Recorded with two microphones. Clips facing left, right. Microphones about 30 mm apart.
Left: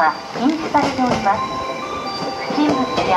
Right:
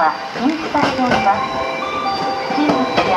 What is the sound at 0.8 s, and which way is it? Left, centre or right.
Speech, right.